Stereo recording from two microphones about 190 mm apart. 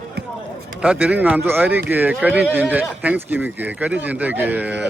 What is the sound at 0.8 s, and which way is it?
Speech, 5° right (ahead or behind).